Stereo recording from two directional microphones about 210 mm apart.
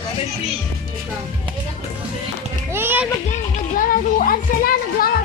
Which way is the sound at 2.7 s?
10° right (ahead or behind).